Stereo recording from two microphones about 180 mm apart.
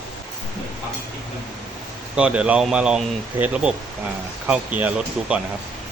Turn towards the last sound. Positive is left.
turn(degrees=-5)  # may be behind; listen again after turning